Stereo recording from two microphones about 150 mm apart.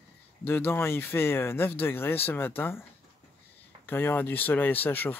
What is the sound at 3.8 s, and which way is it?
Speech, 15° left (ahead or behind).